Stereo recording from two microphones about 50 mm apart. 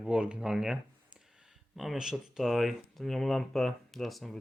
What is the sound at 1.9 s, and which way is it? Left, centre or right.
Speech, centre.